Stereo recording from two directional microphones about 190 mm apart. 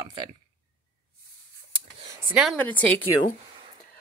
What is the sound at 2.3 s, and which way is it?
Speech, 5° right (ahead or behind).